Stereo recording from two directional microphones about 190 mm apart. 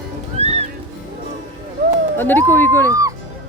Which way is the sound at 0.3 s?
35° right (ahead or behind).